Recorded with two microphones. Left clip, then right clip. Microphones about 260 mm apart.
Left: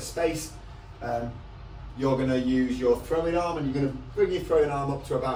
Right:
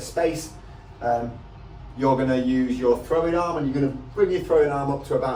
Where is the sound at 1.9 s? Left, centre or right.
Centre.